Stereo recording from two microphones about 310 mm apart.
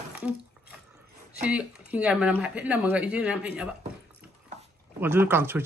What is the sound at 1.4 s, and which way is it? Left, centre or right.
Speech, centre.